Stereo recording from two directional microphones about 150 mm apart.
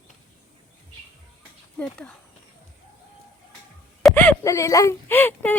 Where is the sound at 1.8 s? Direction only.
5° left (ahead or behind).